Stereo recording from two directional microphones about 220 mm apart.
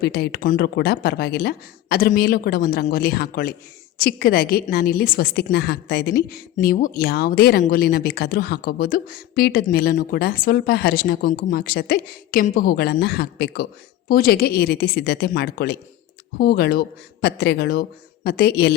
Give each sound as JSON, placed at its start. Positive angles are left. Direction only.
{"t": 0.0, "sound": "a woman's voice", "side_deg": 45}